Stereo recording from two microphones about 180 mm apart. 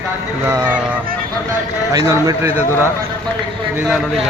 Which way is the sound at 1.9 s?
15° right (ahead or behind).